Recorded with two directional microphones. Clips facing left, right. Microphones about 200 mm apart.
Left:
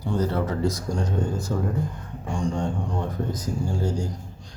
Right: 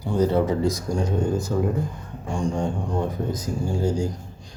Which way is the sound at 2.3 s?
5° right (ahead or behind).